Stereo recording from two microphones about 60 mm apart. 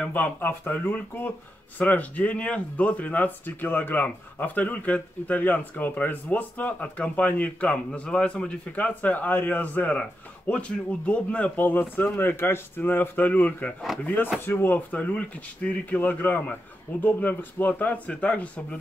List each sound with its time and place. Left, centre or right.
0.1 s a man's voice: left
14.9 s speech: left